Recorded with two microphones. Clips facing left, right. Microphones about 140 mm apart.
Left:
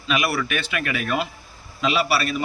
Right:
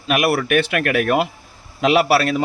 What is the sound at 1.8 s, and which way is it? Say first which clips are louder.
Speech: right 7 dB; 80° right.